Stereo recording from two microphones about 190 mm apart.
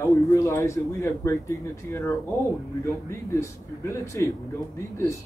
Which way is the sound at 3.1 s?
15° left (ahead or behind).